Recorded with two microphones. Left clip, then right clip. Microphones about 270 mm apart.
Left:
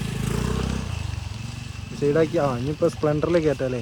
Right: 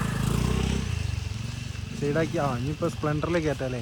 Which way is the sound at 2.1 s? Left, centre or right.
Left.